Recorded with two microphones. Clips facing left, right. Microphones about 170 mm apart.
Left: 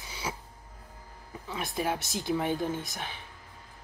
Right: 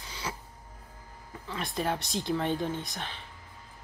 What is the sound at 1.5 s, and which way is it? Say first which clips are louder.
Speech: even; 5° left (ahead or behind).